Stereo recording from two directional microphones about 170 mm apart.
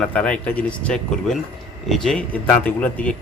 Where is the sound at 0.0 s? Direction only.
5° left (ahead or behind).